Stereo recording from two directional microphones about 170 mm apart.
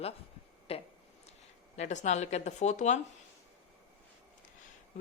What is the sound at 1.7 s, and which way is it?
Speech, 45° left (ahead or behind).